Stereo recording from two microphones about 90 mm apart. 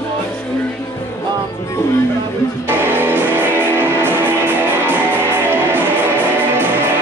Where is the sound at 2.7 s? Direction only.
20° right (ahead or behind).